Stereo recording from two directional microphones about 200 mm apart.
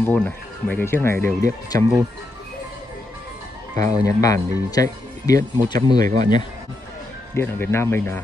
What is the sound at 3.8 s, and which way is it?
Speech, 35° right (ahead or behind).